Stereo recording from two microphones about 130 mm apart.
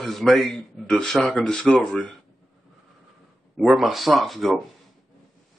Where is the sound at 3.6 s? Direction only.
Centre (ahead or behind).